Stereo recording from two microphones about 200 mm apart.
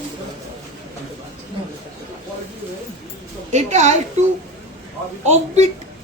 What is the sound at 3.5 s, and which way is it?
Speech, 35° right (ahead or behind).